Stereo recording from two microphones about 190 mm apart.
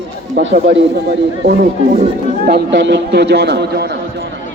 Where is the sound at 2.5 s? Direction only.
65° right (ahead or behind).